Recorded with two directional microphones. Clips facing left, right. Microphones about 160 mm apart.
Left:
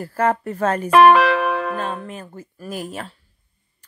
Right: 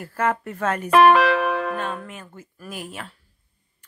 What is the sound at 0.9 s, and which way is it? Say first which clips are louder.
Music: left 2 dB; 80° left.